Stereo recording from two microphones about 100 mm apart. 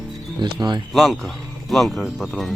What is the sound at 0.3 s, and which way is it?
Speech, 50° right (ahead or behind).